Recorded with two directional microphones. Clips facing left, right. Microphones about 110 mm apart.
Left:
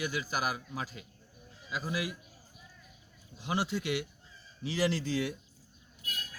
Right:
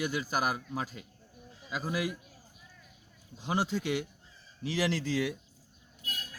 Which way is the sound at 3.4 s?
40° right (ahead or behind).